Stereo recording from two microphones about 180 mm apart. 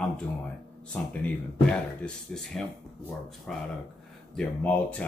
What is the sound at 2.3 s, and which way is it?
Speech, 5° left (ahead or behind).